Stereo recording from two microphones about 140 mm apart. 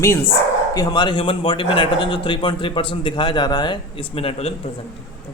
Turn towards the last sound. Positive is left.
turn(degrees=45)  # may be behind; listen again after turning